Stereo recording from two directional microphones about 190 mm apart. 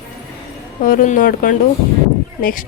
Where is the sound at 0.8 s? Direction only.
45° left (ahead or behind).